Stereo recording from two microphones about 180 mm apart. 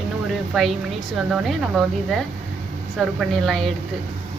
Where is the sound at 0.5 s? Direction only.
Centre (ahead or behind).